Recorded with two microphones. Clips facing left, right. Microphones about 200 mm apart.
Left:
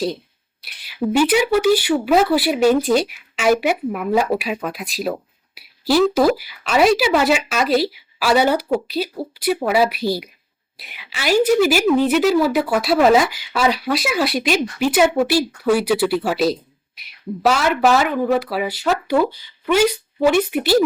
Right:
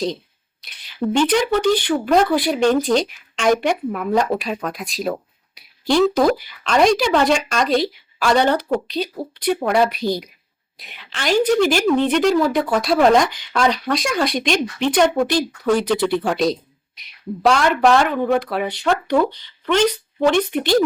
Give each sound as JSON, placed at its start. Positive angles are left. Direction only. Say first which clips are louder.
{"t": 0.6, "sound": "a woman's voice", "louder": "left 1 dB", "side_deg": 5}